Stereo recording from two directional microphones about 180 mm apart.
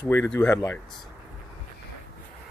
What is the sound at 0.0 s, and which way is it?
Speech, 15° left (ahead or behind).